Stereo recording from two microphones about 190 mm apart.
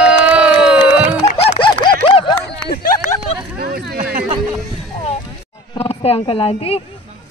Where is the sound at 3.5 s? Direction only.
55° right (ahead or behind).